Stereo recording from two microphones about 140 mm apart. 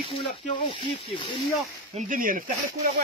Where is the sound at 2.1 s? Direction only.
80° right.